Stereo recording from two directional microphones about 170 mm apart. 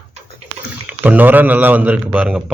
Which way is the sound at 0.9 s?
10° right (ahead or behind).